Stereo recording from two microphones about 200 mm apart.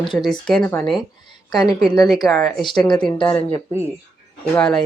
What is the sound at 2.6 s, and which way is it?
Speech, 20° left (ahead or behind).